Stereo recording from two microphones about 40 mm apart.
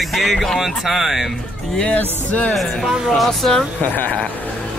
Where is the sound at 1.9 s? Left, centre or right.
Left.